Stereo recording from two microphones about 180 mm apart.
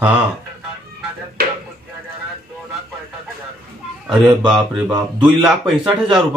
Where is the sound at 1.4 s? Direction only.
55° right (ahead or behind).